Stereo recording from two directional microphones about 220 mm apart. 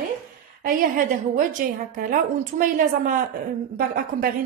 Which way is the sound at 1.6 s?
40° right (ahead or behind).